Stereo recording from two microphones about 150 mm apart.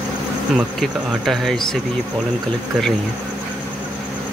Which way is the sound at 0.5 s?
Centre (ahead or behind).